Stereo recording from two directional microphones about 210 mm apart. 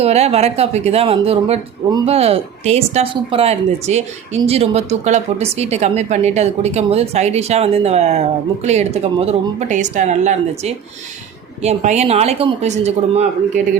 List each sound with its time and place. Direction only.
0.0 s speech: 30° right (ahead or behind)